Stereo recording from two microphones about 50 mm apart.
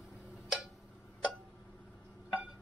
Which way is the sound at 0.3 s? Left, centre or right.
Centre.